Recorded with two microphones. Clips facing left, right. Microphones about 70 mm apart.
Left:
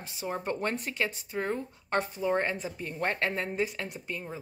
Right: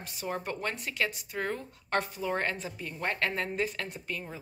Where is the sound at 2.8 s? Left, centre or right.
Left.